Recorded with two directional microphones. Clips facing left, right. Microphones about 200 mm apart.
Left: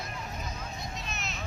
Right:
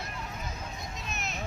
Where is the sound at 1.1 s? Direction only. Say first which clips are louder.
Right 1 dB; 55° right (ahead or behind).